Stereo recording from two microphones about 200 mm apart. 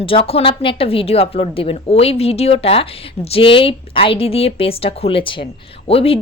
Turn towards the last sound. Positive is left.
turn(degrees=30)  # may be behind; listen again after turning